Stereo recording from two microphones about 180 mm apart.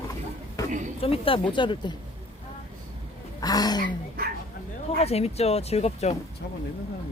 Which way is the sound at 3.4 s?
20° left (ahead or behind).